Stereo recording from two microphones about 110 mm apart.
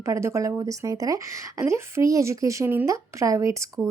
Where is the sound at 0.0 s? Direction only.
25° right (ahead or behind).